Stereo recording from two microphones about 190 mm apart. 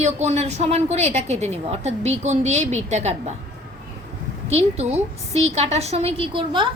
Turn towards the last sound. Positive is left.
turn(degrees=-25)  # may be behind; listen again after turning